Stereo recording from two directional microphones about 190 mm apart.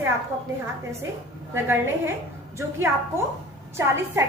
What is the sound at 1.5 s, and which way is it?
A woman's voice, 10° right (ahead or behind).